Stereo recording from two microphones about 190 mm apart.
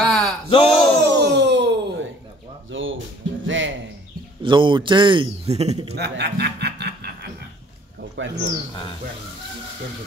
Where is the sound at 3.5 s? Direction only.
85° right.